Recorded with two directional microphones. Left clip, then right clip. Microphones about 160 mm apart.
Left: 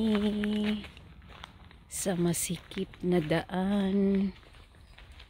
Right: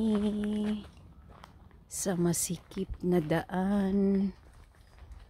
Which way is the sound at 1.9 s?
15° right (ahead or behind).